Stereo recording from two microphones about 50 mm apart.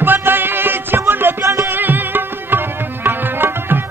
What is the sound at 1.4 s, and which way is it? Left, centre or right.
Music, right.